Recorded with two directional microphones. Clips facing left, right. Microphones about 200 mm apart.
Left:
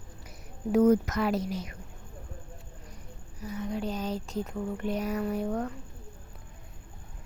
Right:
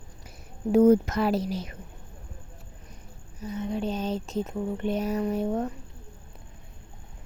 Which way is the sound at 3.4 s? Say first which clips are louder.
Right 3 dB; 25° right (ahead or behind).